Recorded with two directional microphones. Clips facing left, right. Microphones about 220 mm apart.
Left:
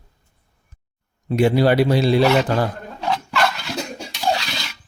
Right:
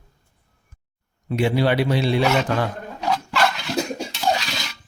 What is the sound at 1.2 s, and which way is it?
A man's voice, 40° left (ahead or behind).